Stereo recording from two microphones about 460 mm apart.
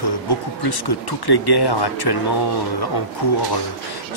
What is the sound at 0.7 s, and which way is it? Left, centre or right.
Speech, left.